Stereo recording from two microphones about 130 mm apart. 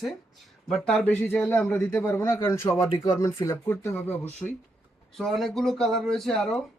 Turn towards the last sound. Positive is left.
turn(degrees=5)  # may be behind; listen again after turning